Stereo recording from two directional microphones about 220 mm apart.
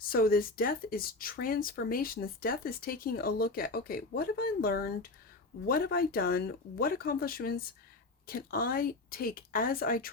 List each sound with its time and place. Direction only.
0.1 s speech: 40° left (ahead or behind)